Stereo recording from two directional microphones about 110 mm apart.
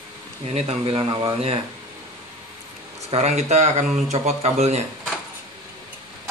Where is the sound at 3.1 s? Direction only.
85° right.